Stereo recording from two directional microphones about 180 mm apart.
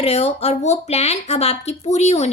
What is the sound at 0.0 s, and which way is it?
Speech, 35° left (ahead or behind).